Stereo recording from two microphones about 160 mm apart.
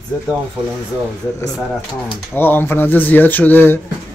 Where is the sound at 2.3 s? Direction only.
15° left (ahead or behind).